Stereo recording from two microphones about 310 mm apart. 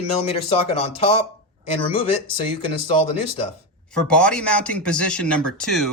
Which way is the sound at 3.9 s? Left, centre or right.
Centre.